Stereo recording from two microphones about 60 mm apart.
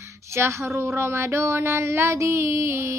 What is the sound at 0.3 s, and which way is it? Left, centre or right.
Speech, right.